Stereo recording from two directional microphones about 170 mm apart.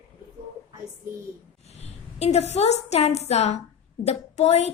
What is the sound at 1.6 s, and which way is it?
A woman's voice, 40° left (ahead or behind).